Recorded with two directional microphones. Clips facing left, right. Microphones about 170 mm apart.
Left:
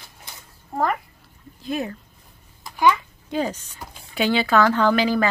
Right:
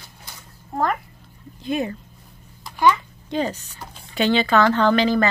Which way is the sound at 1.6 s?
Centre (ahead or behind).